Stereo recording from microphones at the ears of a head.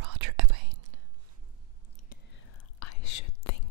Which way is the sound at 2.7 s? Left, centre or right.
Left.